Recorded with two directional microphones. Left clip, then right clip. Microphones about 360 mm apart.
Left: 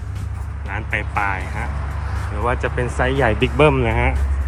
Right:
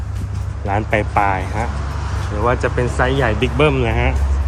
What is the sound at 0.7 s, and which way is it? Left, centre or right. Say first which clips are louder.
Speech: right 6 dB; centre.